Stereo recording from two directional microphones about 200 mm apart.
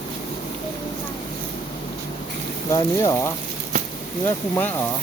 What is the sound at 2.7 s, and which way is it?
Speech, 20° left (ahead or behind).